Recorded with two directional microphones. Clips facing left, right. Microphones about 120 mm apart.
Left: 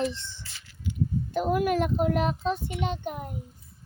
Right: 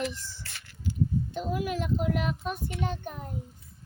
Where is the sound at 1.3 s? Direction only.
55° left (ahead or behind).